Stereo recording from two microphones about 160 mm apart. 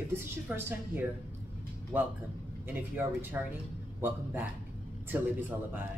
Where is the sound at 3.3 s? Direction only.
15° right (ahead or behind).